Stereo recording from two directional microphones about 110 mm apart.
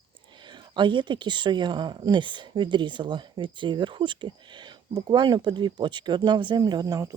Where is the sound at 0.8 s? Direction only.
45° right (ahead or behind).